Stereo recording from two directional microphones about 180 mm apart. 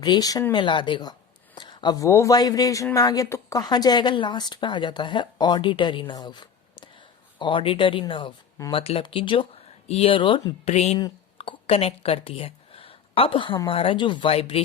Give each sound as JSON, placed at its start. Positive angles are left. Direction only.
{"t": 0.0, "sound": "speech", "side_deg": 20}
{"t": 10.9, "sound": "speech", "side_deg": 25}